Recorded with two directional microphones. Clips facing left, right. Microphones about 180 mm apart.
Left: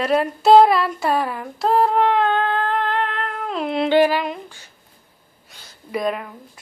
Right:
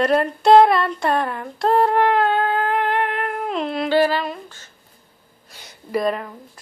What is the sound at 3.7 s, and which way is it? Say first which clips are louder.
Humming: left 3 dB; 20° left (ahead or behind).